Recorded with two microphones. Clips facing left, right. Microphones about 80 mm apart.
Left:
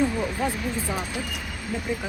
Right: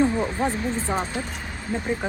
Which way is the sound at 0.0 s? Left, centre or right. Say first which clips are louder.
Right 3 dB; right.